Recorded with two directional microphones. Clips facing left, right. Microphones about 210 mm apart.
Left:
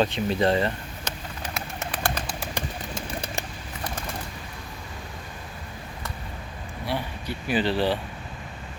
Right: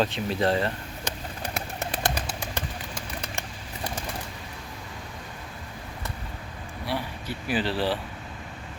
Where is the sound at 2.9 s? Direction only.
30° left (ahead or behind).